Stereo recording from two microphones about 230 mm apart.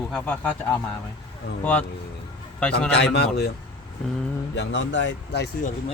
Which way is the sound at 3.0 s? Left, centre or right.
Left.